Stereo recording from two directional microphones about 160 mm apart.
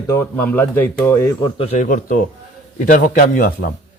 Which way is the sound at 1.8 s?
55° left (ahead or behind).